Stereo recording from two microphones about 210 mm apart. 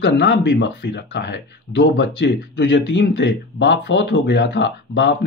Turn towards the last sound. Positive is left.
turn(degrees=55)  # may be behind; listen again after turning